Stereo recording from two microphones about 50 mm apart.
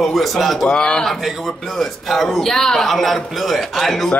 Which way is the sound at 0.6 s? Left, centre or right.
Centre.